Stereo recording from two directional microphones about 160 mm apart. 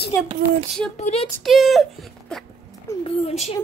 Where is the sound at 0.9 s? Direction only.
45° left (ahead or behind).